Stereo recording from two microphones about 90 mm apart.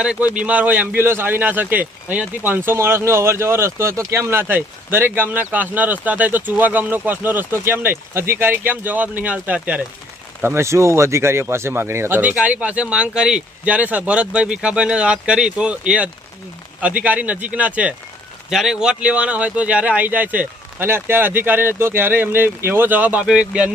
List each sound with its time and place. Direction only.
0.0 s a man's voice: 15° right (ahead or behind)
10.4 s a man's voice: 30° right (ahead or behind); by 23.7 s 10° right (ahead or behind)